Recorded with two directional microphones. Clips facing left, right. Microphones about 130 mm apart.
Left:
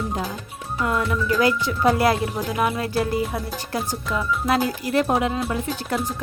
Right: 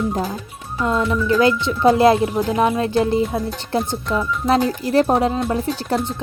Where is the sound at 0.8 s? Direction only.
20° right (ahead or behind).